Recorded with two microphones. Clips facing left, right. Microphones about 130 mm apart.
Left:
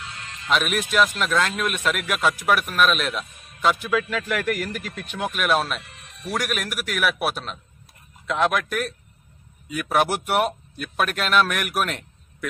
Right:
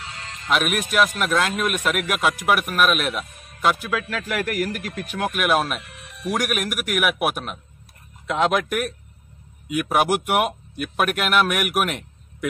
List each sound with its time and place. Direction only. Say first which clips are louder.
0.0 s music: right 1 dB; 30° right (ahead or behind)
0.5 s speech: right 1 dB; 5° right (ahead or behind)
5.8 s music: right 2 dB; 65° right (ahead or behind)
6.2 s speech: right 3 dB; 15° right (ahead or behind)